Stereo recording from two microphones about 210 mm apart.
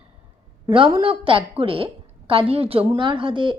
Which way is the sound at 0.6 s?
25° right (ahead or behind).